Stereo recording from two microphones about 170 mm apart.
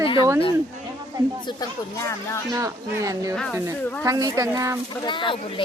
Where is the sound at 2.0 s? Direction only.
15° left (ahead or behind).